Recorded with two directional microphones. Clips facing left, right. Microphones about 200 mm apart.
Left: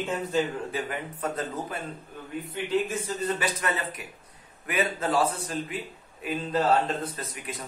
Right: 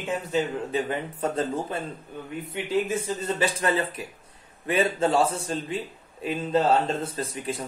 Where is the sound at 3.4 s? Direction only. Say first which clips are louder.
Right 5 dB; 30° right (ahead or behind).